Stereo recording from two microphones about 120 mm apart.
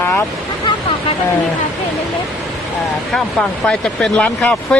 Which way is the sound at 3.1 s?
5° left (ahead or behind).